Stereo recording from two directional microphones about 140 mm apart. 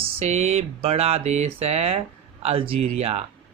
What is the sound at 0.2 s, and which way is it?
Speech, 50° right (ahead or behind).